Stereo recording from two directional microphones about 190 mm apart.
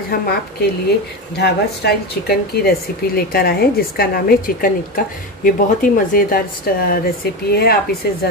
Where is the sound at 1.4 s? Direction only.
55° left (ahead or behind).